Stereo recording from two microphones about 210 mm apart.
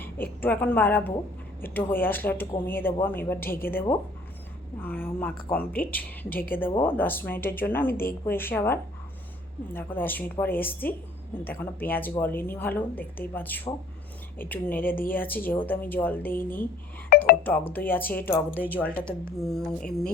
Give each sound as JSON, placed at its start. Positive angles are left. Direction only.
{"t": 0.4, "sound": "a woman's voice", "side_deg": 10}
{"t": 17.1, "sound": "music", "side_deg": 50}
{"t": 17.7, "sound": "a woman's voice", "side_deg": 10}